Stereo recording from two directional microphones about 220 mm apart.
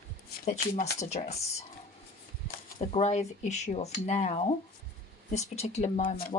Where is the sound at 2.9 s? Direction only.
30° left (ahead or behind).